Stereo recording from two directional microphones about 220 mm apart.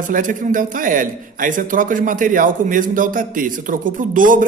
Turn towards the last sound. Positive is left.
turn(degrees=-35)  # may be behind; listen again after turning